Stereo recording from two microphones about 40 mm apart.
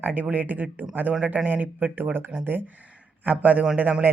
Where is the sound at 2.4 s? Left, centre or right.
Right.